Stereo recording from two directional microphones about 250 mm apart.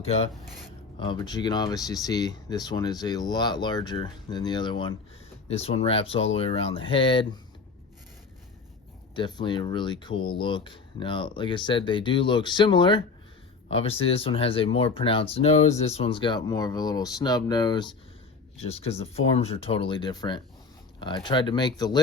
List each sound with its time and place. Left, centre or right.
0.0 s speech: left
9.1 s speech: centre